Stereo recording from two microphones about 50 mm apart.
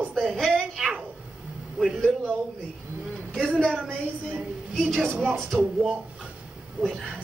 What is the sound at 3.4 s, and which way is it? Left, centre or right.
Speech, centre.